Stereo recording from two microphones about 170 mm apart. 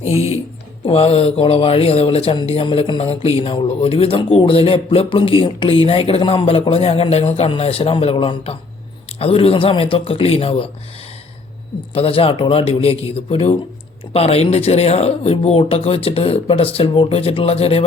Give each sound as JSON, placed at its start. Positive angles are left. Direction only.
{"t": 0.9, "sound": "speech", "side_deg": 35}
{"t": 11.9, "sound": "speech", "side_deg": 35}